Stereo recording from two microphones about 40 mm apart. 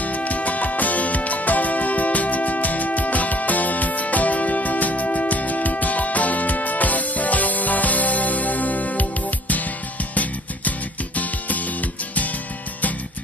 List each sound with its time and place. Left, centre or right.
0.0 s music: left
11.1 s music: left